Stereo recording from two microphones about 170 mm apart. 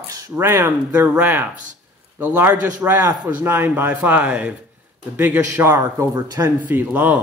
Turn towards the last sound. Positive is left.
turn(degrees=-10)  # may be behind; listen again after turning